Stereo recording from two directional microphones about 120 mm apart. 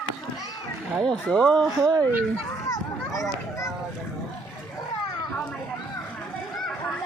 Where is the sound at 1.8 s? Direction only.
30° right (ahead or behind).